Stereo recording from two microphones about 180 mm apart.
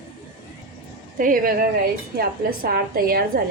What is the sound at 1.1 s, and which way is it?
A woman's voice, 50° right (ahead or behind).